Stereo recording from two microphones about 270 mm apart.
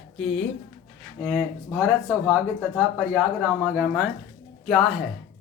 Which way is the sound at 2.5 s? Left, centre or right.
Centre.